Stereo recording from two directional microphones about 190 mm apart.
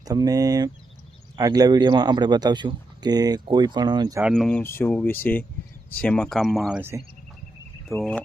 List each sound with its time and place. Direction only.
0.0 s speech: 20° right (ahead or behind)
4.2 s speech: centre (ahead or behind)
7.9 s speech: 5° left (ahead or behind)